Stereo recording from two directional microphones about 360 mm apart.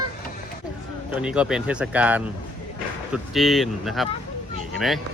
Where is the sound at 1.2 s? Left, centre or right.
Centre.